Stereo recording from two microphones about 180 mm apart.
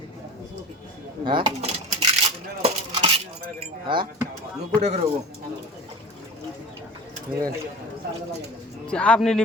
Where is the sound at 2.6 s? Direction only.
30° right (ahead or behind).